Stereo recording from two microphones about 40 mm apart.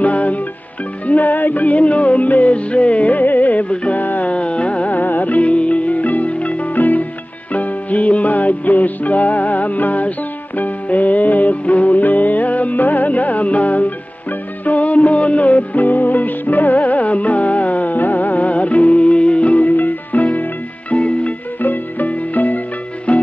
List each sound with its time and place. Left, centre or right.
0.0 s music: left
3.6 s music: left
4.0 s music: left
4.3 s carnatic music: left
4.9 s music: left
19.4 s music: left
21.5 s music: left